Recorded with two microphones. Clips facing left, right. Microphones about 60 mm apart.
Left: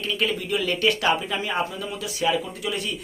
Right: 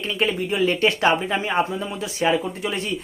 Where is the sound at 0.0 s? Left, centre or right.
Right.